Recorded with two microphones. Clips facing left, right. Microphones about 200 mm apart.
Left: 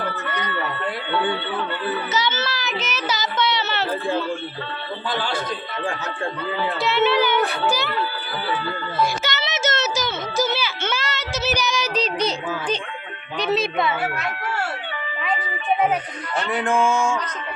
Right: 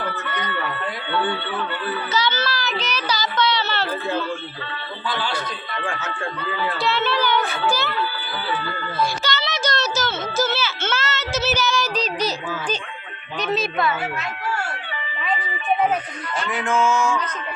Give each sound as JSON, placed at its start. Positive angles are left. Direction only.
{"t": 1.9, "sound": "child singing", "side_deg": 20}
{"t": 5.0, "sound": "a sound", "side_deg": 45}
{"t": 5.8, "sound": "music", "side_deg": 35}
{"t": 6.7, "sound": "speech", "side_deg": 20}
{"t": 9.0, "sound": "music", "side_deg": 20}
{"t": 10.3, "sound": "a sound", "side_deg": 15}
{"t": 16.5, "sound": "music", "side_deg": 35}